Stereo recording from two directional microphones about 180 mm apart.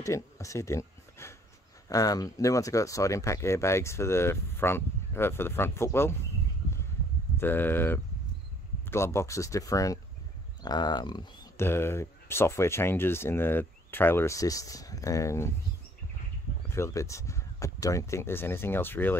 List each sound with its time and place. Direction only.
0.0 s speech: 15° left (ahead or behind)
7.3 s speech: 10° left (ahead or behind)
11.5 s speech: 15° left (ahead or behind)
16.7 s speech: 15° left (ahead or behind)